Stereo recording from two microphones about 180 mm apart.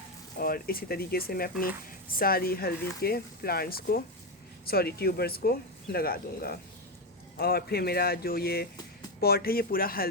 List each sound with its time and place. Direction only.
0.3 s speech: 55° left (ahead or behind)